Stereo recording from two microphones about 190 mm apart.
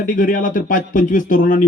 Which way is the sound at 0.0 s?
45° left (ahead or behind).